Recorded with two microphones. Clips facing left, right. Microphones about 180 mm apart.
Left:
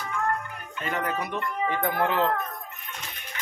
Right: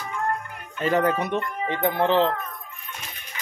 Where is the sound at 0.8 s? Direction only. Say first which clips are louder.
Right 8 dB; 30° right (ahead or behind).